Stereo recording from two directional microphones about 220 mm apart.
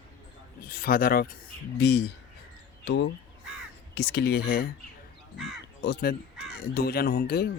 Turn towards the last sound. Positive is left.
turn(degrees=45)  # may be behind; listen again after turning